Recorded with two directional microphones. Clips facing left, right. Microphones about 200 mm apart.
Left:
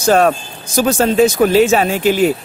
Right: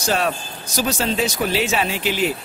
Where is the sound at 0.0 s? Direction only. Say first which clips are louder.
Left 9 dB; 50° left (ahead or behind).